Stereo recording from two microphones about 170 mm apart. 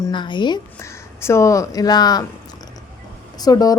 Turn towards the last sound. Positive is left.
turn(degrees=20)  # may be behind; listen again after turning